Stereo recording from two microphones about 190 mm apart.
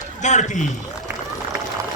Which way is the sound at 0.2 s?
40° left (ahead or behind).